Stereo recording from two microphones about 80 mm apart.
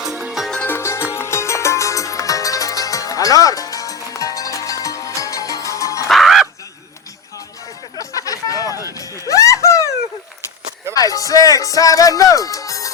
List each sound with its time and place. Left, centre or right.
0.0 s music: centre
0.6 s music: left
6.1 s music: centre
7.9 s a sound: left
9.0 s music: left
10.9 s music: left